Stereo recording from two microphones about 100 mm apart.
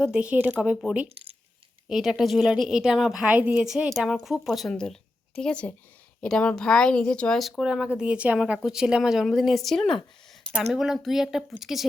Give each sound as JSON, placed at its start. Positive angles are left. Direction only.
{"t": 0.0, "sound": "speech", "side_deg": -15}
{"t": 1.0, "sound": "speech", "side_deg": -75}
{"t": 1.9, "sound": "speech", "side_deg": -5}
{"t": 3.3, "sound": "speech", "side_deg": -15}
{"t": 3.7, "sound": "speech", "side_deg": 0}